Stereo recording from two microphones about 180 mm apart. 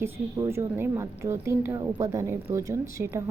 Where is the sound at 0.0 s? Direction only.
15° right (ahead or behind).